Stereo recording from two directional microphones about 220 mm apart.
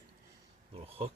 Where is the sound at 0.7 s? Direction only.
25° right (ahead or behind).